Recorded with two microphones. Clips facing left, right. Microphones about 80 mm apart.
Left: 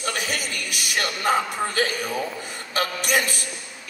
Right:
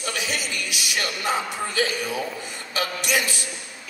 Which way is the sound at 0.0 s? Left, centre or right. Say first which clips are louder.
Left 1 dB; left.